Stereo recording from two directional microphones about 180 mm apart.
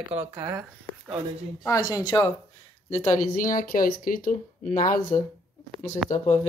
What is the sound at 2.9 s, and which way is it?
Speech, 45° left (ahead or behind).